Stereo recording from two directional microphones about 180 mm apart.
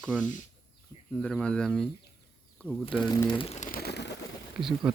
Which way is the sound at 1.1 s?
5° left (ahead or behind).